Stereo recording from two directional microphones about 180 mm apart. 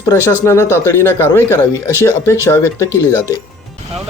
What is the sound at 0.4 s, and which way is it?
Speech, 15° left (ahead or behind).